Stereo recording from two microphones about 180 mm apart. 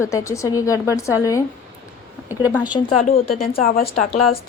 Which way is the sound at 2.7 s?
20° left (ahead or behind).